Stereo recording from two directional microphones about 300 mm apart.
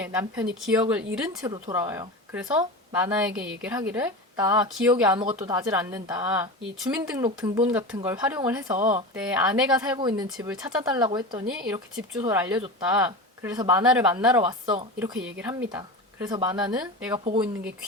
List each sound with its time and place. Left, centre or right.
0.0 s a woman's voice: centre
8.7 s speech: right
9.1 s a woman's voice: centre
9.9 s a woman's voice: centre
10.2 s a woman's voice: centre
11.7 s a woman's voice: centre
17.1 s a woman's voice: centre
17.4 s a woman's voice: centre